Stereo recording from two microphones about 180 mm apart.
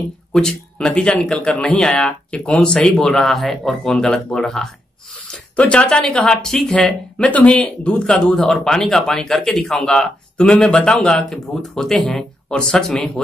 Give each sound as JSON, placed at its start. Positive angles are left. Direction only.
{"t": 0.3, "sound": "speech", "side_deg": 5}